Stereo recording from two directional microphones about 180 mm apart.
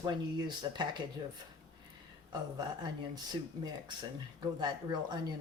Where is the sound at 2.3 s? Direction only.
25° right (ahead or behind).